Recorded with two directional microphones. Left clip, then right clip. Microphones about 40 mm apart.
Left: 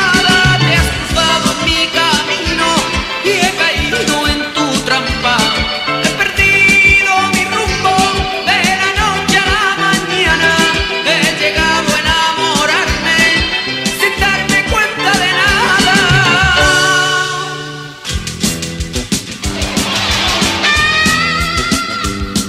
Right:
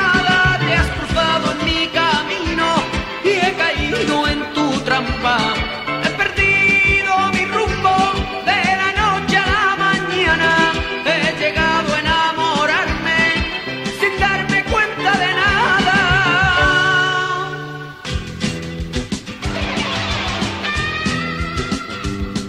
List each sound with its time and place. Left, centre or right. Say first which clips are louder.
0.0 s music: left 4 dB; left
11.1 s music: left 3 dB; left
20.2 s music: left 9 dB; left
20.9 s music: left 10 dB; left